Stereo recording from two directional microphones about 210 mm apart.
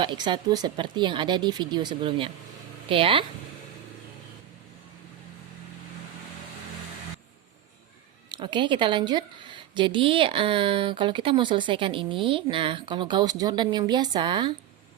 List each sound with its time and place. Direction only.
0.0 s a woman's voice: 20° right (ahead or behind)
8.3 s a woman's voice: 20° right (ahead or behind)